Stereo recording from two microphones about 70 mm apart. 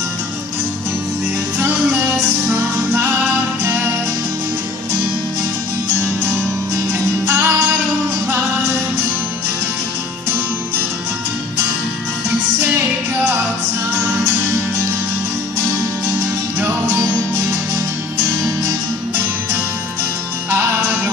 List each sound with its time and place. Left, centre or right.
3.6 s music: right
7.2 s music: right